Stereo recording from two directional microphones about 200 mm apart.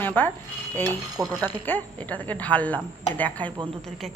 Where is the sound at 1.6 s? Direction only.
10° left (ahead or behind).